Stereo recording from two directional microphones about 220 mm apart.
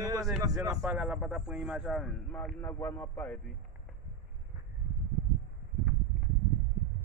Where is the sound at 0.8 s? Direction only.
5° right (ahead or behind).